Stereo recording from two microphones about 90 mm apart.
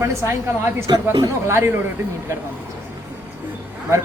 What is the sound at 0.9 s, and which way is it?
Speech, 55° right (ahead or behind).